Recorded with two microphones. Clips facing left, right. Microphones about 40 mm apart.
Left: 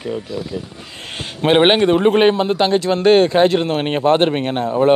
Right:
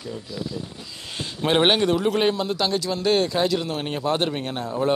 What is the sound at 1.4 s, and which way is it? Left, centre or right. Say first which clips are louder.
A man's voice: left 7 dB; left.